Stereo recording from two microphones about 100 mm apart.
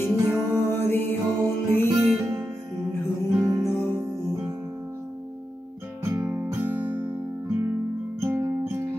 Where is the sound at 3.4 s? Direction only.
35° right (ahead or behind).